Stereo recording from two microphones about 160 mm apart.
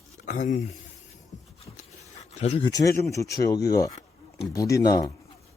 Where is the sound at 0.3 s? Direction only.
55° left (ahead or behind).